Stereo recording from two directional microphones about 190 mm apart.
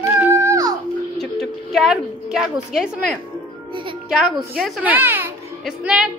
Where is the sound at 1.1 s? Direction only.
Centre (ahead or behind).